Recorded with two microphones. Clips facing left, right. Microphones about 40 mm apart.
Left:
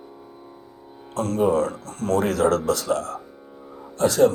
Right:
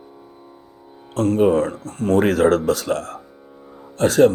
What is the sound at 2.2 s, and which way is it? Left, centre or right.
Speech, right.